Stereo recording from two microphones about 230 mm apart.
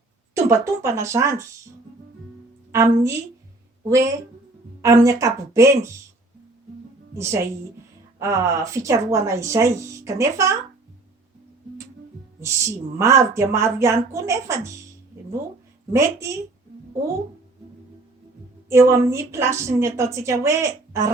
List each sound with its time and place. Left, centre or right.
0.3 s speech: centre
2.7 s speech: centre
7.2 s speech: centre
12.4 s speech: centre
15.9 s speech: centre
18.7 s speech: centre